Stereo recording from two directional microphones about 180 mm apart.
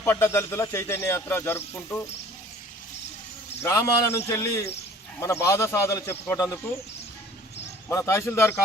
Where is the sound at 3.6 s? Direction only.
15° left (ahead or behind).